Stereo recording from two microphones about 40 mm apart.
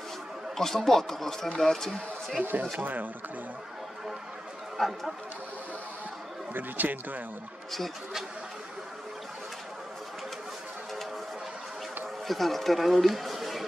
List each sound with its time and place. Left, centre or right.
0.6 s speech: centre
2.8 s speech: right
4.7 s speech: centre
6.5 s speech: right
12.3 s speech: centre